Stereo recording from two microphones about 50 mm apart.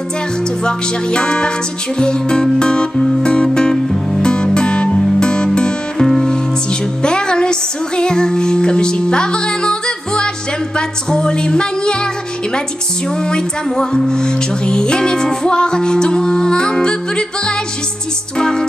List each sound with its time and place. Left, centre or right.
0.7 s music: centre
13.2 s music: centre